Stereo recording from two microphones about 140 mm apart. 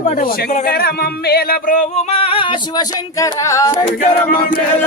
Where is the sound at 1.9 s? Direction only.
45° left (ahead or behind).